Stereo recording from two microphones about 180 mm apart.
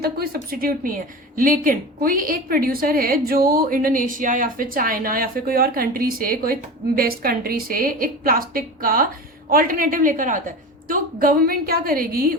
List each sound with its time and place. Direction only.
0.3 s a woman's voice: 50° right (ahead or behind)